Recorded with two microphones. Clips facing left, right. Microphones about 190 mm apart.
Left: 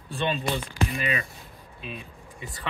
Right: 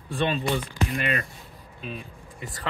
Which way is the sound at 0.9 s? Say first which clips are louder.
Right 2 dB; 60° right (ahead or behind).